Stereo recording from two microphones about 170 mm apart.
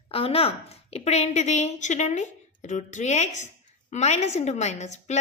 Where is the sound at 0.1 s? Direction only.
35° left (ahead or behind).